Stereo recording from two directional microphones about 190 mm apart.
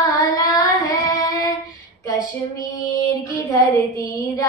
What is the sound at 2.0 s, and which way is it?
Child singing, 15° left (ahead or behind).